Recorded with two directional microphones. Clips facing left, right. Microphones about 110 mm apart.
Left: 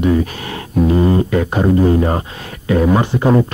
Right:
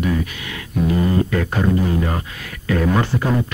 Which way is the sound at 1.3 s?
20° left (ahead or behind).